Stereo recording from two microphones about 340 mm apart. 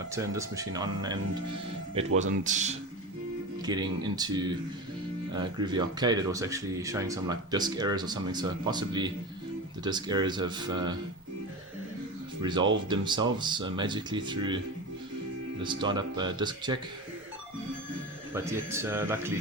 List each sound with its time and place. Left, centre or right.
0.1 s speech: centre
12.4 s speech: centre
15.6 s speech: centre
18.3 s speech: centre